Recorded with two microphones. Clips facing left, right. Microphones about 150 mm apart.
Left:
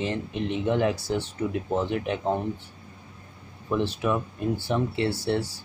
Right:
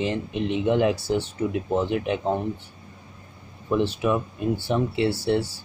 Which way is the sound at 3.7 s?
10° right (ahead or behind).